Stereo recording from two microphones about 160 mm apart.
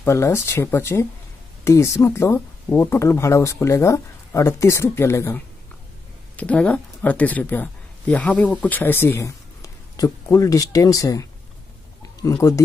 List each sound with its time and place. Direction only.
0.0 s speech: 15° left (ahead or behind)